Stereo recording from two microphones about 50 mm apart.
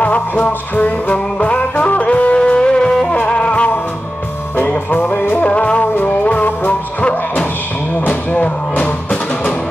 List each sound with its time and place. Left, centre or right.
0.0 s music: left
5.4 s music: left